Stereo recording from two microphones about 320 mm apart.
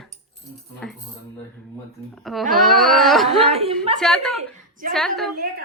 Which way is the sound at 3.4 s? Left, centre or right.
Centre.